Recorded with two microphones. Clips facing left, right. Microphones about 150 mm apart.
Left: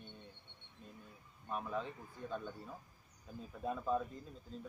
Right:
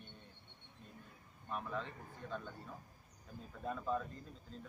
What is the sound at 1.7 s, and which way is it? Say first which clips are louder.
Speech: left 2 dB; 10° left (ahead or behind).